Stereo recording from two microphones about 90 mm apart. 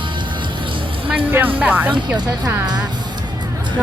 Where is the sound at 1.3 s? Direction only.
20° right (ahead or behind).